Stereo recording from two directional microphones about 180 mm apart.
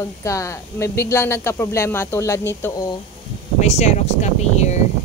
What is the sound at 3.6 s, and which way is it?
Speech, 40° left (ahead or behind).